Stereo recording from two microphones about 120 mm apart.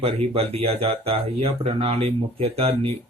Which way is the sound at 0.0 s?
55° right (ahead or behind).